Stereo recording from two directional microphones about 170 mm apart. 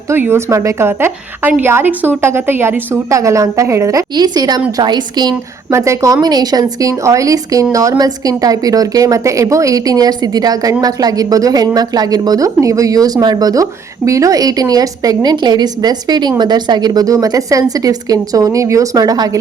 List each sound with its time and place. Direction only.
0.1 s a woman's voice: 15° right (ahead or behind)